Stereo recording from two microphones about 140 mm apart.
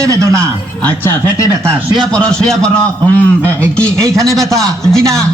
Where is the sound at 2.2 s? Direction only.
5° left (ahead or behind).